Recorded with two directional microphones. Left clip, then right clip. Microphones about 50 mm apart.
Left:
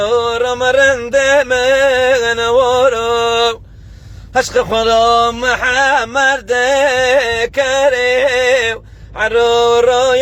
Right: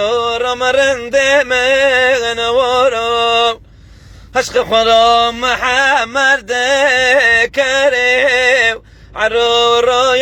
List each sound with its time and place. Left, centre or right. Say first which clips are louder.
0.0 s music: left 1 dB; left
3.1 s a sound: right 1 dB; left
4.4 s music: right 1 dB; left
5.2 s a sound: even; left
5.5 s music: even; left
9.4 s music: left 1 dB; left